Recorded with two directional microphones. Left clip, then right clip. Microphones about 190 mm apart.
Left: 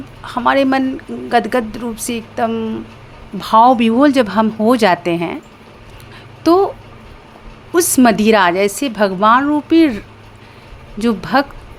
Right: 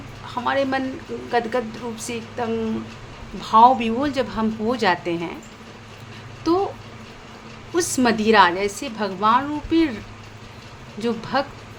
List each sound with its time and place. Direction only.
0.3 s a woman's voice: 40° left (ahead or behind)
6.4 s speech: 40° left (ahead or behind)
7.7 s a woman's voice: 40° left (ahead or behind)
11.0 s a woman's voice: 40° left (ahead or behind)